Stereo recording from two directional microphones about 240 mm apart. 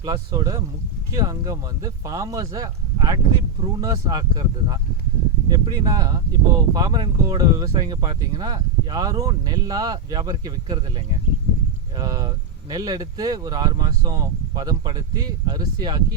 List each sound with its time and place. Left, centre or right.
0.0 s speech: centre